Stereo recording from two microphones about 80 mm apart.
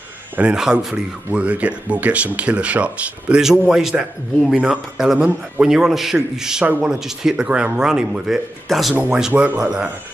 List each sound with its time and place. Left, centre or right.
0.6 s speech: centre
9.3 s speech: right
9.6 s speech: centre